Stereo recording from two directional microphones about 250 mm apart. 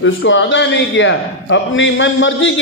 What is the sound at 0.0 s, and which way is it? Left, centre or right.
A man's voice, left.